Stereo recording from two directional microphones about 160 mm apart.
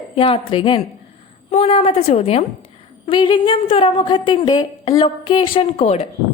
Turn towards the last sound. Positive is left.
turn(degrees=40)  # may be behind; listen again after turning